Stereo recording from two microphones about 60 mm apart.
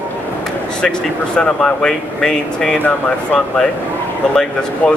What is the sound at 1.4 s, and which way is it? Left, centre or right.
Speech, centre.